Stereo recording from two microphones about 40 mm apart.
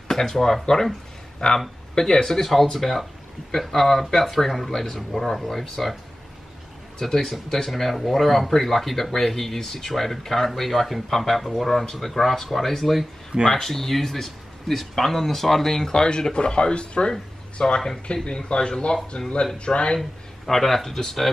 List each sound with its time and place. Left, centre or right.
0.1 s speech: centre
7.0 s speech: centre; by 20.0 s left
20.0 s speech: centre